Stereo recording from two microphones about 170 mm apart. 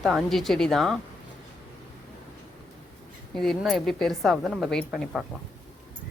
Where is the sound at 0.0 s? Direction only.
Centre (ahead or behind).